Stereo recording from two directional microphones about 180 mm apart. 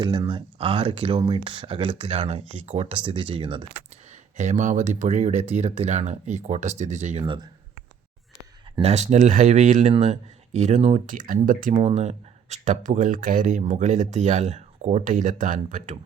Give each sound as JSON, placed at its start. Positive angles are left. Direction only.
{"t": 0.0, "sound": "speech", "side_deg": -25}
{"t": 4.4, "sound": "speech", "side_deg": -40}
{"t": 8.8, "sound": "speech", "side_deg": -40}